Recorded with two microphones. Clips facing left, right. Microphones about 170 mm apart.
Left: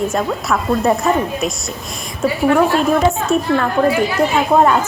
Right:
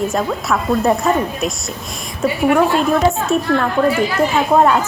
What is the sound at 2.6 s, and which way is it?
A woman's voice, centre (ahead or behind).